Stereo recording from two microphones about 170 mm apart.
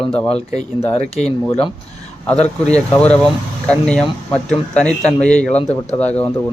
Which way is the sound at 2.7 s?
5° left (ahead or behind).